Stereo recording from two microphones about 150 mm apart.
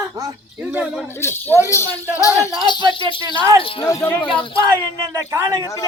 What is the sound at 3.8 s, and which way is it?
Speech, 20° left (ahead or behind).